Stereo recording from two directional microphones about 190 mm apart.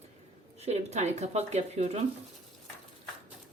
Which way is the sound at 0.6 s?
35° right (ahead or behind).